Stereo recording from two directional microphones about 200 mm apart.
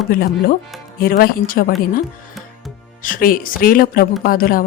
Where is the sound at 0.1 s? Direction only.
50° left (ahead or behind).